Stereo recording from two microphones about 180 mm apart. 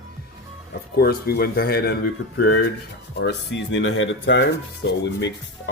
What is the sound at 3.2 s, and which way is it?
Speech, 70° left (ahead or behind).